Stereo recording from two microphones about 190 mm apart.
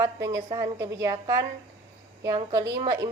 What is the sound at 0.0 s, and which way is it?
A woman's voice, 15° right (ahead or behind).